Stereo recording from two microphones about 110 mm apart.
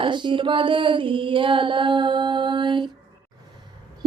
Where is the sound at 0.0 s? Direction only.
45° right (ahead or behind).